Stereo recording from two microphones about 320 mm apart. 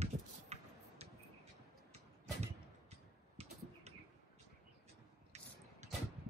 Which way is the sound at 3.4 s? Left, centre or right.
Centre.